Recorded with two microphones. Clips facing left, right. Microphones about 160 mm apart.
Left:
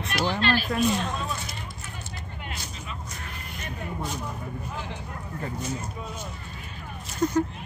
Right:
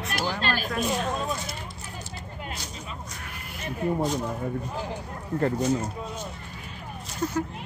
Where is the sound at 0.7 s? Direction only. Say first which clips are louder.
Left 2 dB; 5° right (ahead or behind).